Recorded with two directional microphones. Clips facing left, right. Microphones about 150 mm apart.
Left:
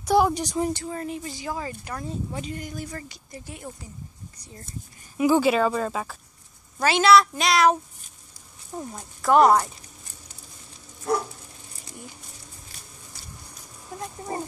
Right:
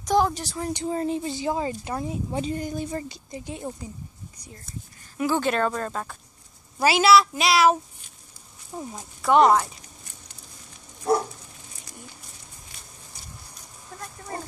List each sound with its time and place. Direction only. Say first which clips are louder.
0.0 s speech: left 2 dB; 10° left (ahead or behind)
0.7 s a woman's voice: right 6 dB; 25° right (ahead or behind)
5.1 s speech: left 4 dB; 10° left (ahead or behind)
6.8 s speech: even; 10° right (ahead or behind)
8.7 s speech: even; centre (ahead or behind)
13.9 s dog: left 4 dB; 20° left (ahead or behind)